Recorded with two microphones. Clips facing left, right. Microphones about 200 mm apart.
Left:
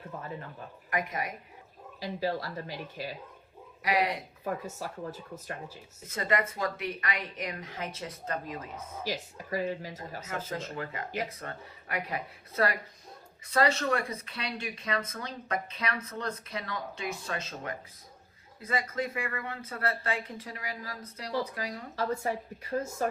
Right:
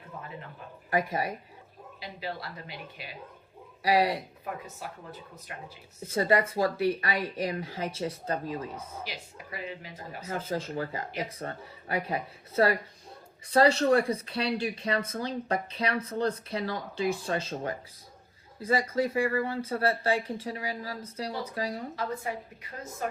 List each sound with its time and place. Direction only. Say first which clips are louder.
0.9 s speech: right 5 dB; 30° right (ahead or behind)
2.0 s speech: left 6 dB; 40° left (ahead or behind)
3.8 s speech: right 4 dB; 30° right (ahead or behind)
6.1 s speech: right 5 dB; 30° right (ahead or behind)
9.5 s speech: left 7 dB; 40° left (ahead or behind)
10.2 s speech: right 5 dB; 30° right (ahead or behind)
21.9 s speech: left 2 dB; 40° left (ahead or behind)